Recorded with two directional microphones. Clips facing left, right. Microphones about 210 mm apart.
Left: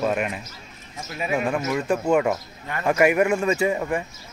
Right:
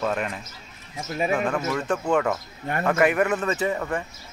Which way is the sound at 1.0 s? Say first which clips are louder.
Right 4 dB; 40° right (ahead or behind).